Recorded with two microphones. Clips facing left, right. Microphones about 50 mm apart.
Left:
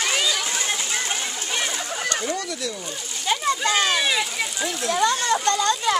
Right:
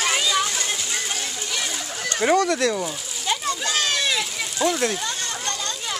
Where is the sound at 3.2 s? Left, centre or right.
Centre.